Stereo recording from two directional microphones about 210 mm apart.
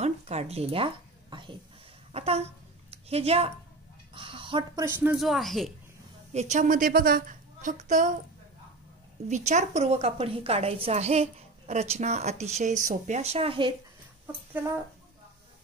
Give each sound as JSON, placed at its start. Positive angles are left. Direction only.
{"t": 0.0, "sound": "a sound", "side_deg": -30}
{"t": 2.1, "sound": "speech", "side_deg": -30}
{"t": 4.8, "sound": "speech", "side_deg": -5}
{"t": 6.3, "sound": "a woman's voice", "side_deg": -35}
{"t": 9.3, "sound": "a woman's voice", "side_deg": -35}
{"t": 14.2, "sound": "speech", "side_deg": -10}